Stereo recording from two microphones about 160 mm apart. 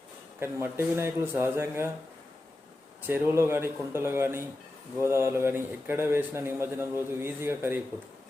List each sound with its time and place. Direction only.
0.3 s a man's voice: 15° right (ahead or behind)
3.1 s a man's voice: 15° right (ahead or behind)